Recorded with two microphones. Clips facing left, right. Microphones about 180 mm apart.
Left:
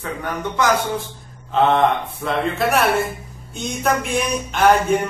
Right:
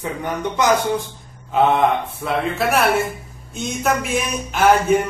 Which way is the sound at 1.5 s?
10° right (ahead or behind).